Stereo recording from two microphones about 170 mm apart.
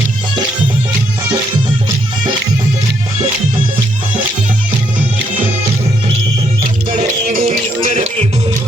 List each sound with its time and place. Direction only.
7.3 s music: 45° right (ahead or behind)